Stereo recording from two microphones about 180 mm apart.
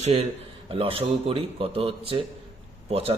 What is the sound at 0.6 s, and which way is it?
Speech, 30° right (ahead or behind).